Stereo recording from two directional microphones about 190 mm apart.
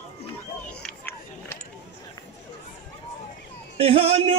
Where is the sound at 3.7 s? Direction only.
30° right (ahead or behind).